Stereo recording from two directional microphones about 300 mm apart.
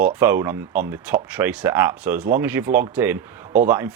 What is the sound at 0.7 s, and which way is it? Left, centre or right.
Speech, right.